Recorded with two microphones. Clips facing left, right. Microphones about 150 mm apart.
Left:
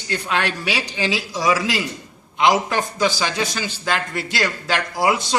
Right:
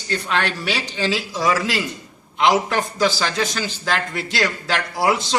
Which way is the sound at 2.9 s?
10° left (ahead or behind).